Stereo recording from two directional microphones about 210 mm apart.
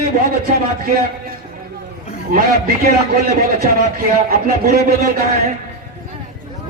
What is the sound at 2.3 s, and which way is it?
A man's voice, 45° right (ahead or behind).